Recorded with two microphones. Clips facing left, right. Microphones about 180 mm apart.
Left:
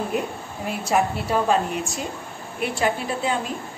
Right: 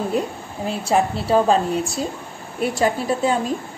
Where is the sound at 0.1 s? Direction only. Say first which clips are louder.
Right 3 dB; 35° right (ahead or behind).